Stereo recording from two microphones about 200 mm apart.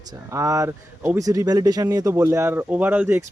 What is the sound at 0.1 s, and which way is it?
Speech, 15° right (ahead or behind).